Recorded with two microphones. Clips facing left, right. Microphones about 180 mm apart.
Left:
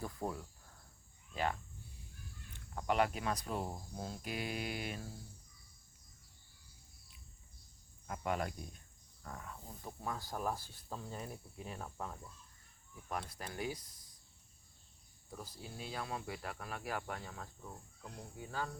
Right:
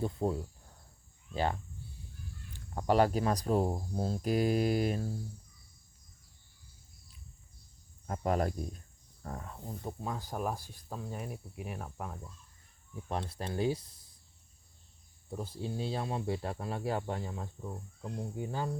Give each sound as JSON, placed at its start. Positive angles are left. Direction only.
{"t": 0.0, "sound": "speech", "side_deg": -25}
{"t": 8.0, "sound": "speech", "side_deg": -40}
{"t": 10.0, "sound": "speech", "side_deg": -20}
{"t": 13.1, "sound": "speech", "side_deg": -25}
{"t": 15.3, "sound": "speech", "side_deg": -25}